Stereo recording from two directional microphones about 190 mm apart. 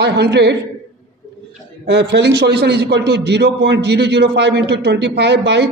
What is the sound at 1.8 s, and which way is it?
A man's voice, 65° right (ahead or behind).